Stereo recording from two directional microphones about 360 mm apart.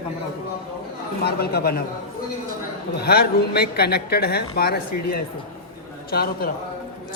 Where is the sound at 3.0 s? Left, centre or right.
Left.